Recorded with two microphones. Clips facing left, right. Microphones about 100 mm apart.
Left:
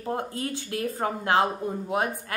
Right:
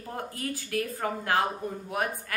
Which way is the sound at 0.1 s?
25° left (ahead or behind).